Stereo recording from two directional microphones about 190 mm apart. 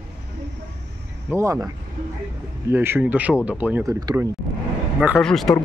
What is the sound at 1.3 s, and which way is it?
Speech, 15° right (ahead or behind).